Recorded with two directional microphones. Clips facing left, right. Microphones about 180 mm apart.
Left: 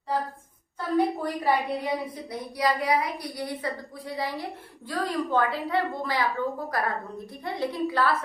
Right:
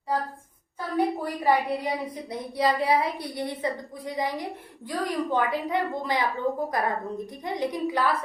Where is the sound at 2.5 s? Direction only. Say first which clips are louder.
Right 2 dB; 25° right (ahead or behind).